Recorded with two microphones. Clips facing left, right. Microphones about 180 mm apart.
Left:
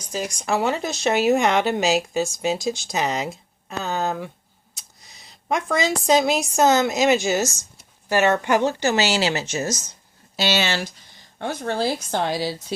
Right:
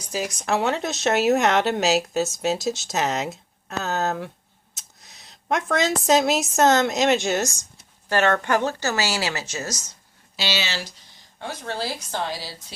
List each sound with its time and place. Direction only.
0.0 s speech: 5° right (ahead or behind)
4.8 s a sound: centre (ahead or behind)
6.0 s speech: centre (ahead or behind); by 9.7 s 25° left (ahead or behind)
10.3 s speech: 50° left (ahead or behind)